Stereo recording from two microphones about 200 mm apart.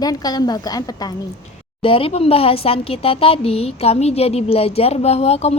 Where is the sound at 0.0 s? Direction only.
20° left (ahead or behind).